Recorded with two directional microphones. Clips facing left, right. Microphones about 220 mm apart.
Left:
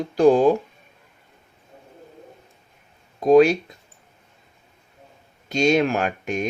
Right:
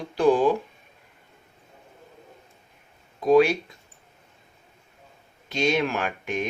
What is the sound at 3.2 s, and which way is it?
Speech, 40° left (ahead or behind).